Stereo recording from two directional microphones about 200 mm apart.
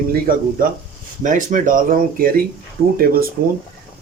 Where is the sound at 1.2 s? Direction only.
40° right (ahead or behind).